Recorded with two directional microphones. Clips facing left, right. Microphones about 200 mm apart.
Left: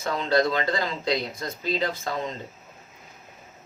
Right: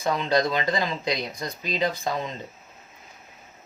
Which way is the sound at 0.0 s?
15° right (ahead or behind).